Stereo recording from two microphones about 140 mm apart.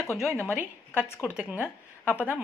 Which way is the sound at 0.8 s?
15° left (ahead or behind).